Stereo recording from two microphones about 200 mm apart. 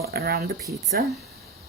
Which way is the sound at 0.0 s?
50° right (ahead or behind).